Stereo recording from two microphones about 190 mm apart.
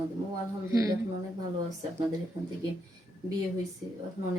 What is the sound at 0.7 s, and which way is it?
Speech, 20° right (ahead or behind).